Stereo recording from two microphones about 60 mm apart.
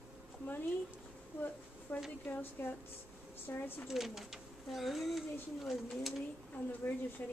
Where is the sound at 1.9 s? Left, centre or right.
Left.